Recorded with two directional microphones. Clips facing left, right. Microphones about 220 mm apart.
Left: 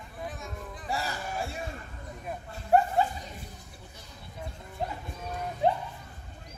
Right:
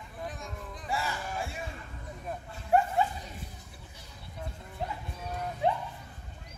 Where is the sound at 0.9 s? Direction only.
40° left (ahead or behind).